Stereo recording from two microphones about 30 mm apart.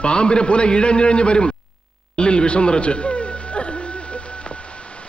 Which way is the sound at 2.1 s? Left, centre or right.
Left.